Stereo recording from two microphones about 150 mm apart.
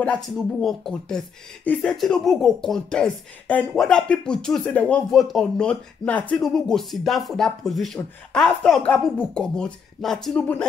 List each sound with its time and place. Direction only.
0.0 s speech: 5° left (ahead or behind)